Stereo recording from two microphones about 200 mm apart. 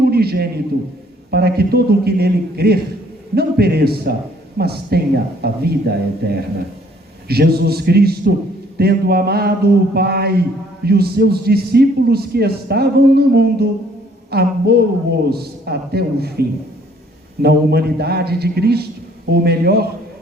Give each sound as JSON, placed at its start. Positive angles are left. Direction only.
{"t": 0.0, "sound": "a man's voice", "side_deg": -50}